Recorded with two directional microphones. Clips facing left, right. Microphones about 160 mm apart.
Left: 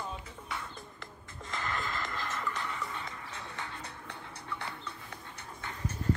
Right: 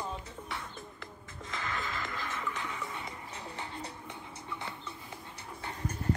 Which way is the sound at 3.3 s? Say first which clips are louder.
Right 1 dB; 25° right (ahead or behind).